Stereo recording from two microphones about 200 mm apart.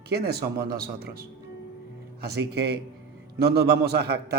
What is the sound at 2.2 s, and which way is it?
Speech, 55° right (ahead or behind).